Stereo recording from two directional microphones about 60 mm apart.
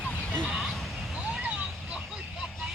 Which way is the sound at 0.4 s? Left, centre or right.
Centre.